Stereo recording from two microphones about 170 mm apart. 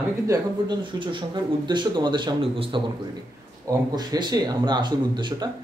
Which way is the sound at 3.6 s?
25° right (ahead or behind).